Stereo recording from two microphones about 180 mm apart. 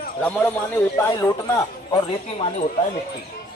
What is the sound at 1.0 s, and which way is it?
Speech, 15° left (ahead or behind).